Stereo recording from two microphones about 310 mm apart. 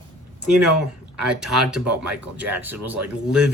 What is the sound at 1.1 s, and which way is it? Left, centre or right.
Speech, centre.